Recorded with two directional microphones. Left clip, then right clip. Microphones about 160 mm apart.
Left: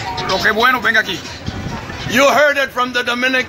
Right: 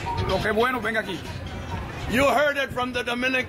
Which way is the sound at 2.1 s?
15° left (ahead or behind).